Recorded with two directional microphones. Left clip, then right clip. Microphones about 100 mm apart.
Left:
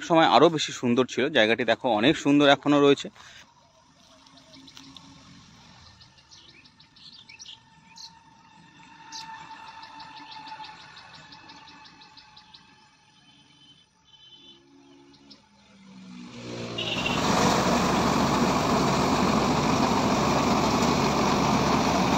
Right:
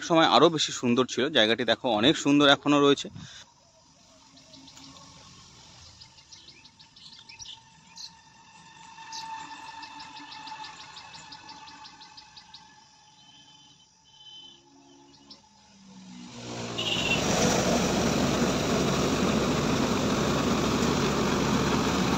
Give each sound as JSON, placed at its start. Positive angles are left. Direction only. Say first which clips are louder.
{"t": 0.0, "sound": "speech", "louder": "left 2 dB", "side_deg": 10}
{"t": 8.0, "sound": "a sound", "louder": "right 1 dB", "side_deg": -20}
{"t": 16.5, "sound": "vehicle", "louder": "even", "side_deg": -30}
{"t": 17.3, "sound": "vehicle", "louder": "left 5 dB", "side_deg": 5}